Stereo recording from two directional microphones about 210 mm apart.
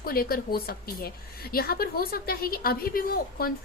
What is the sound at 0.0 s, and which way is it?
A woman's voice, 45° left (ahead or behind).